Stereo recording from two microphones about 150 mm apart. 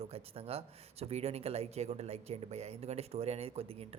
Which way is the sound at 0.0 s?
40° right (ahead or behind).